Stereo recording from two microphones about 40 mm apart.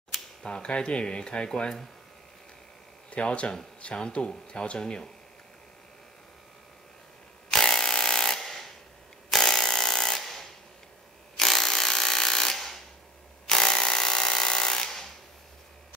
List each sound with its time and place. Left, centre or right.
0.4 s speech: left
3.1 s speech: left
7.5 s tools: centre